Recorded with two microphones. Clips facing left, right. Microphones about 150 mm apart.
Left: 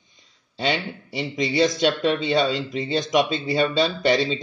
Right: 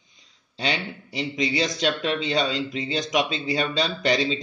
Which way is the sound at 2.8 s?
50° left (ahead or behind).